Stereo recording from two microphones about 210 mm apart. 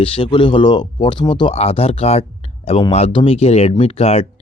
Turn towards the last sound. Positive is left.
turn(degrees=30)  # may be behind; listen again after turning